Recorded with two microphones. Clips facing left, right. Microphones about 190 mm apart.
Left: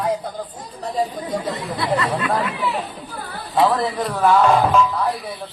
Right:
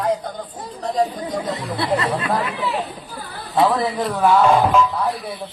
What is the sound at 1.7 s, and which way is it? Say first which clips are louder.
Speech: right 1 dB; 30° right (ahead or behind).